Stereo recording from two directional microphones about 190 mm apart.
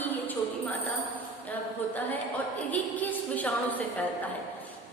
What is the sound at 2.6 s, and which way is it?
A woman's voice, 10° left (ahead or behind).